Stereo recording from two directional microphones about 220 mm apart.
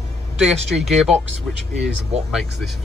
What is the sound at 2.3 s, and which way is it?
Speech, centre (ahead or behind).